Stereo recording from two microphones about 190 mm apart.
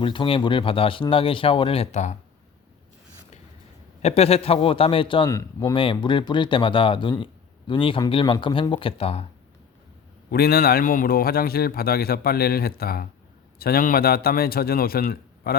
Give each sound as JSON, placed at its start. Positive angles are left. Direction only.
{"t": 0.0, "sound": "a man's voice", "side_deg": 25}
{"t": 4.0, "sound": "a man's voice", "side_deg": 30}
{"t": 10.3, "sound": "a man's voice", "side_deg": 55}